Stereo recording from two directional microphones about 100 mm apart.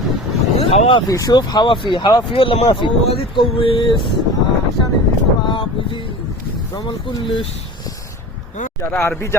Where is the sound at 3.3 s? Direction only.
60° left (ahead or behind).